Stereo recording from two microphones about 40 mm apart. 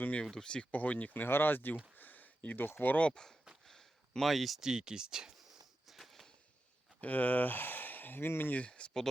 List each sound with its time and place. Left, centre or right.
0.4 s speech: left
0.7 s speech: left
1.2 s speech: left
2.0 s a sound: left
2.8 s speech: left
3.1 s speech: centre
3.7 s a sound: centre
4.6 s speech: centre
5.9 s a sound: centre
7.0 s speech: left
8.5 s speech: left